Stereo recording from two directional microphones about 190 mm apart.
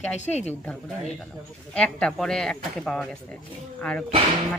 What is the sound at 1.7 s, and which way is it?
Speech, 5° left (ahead or behind).